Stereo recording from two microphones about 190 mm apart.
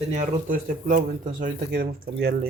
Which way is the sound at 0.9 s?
45° right (ahead or behind).